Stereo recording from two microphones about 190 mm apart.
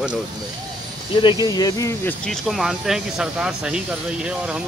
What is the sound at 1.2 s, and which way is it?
Speech, 25° left (ahead or behind).